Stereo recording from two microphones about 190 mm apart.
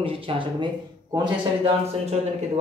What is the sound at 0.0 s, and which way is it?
Speech, 30° right (ahead or behind).